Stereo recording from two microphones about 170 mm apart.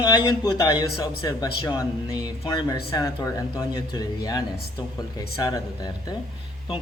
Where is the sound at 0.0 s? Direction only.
25° left (ahead or behind).